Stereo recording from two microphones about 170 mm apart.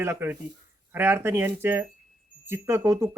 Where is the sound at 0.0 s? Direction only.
15° right (ahead or behind).